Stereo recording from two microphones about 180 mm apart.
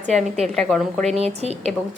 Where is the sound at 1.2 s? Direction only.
35° right (ahead or behind).